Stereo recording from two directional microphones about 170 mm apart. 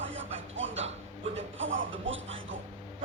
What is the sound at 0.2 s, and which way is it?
Music, 90° right.